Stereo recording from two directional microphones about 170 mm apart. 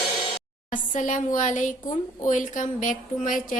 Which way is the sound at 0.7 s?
50° left (ahead or behind).